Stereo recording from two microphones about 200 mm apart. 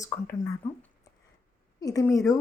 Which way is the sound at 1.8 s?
15° left (ahead or behind).